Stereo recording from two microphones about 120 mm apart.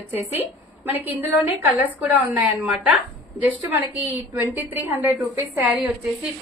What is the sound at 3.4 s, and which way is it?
A woman's voice, 15° right (ahead or behind).